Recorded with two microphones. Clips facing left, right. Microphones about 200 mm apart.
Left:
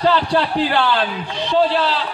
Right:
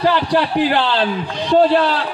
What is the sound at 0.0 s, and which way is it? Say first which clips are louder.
A man's voice: right 1 dB; 15° right (ahead or behind).